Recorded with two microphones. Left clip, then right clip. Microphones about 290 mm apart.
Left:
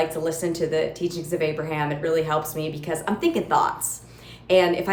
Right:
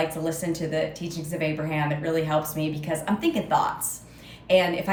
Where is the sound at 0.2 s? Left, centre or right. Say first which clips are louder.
Left 4 dB; centre.